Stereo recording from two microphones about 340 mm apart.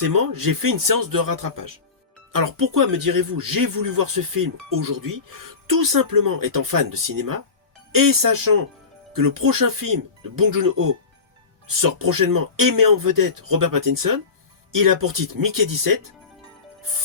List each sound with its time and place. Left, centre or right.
0.0 s speech: right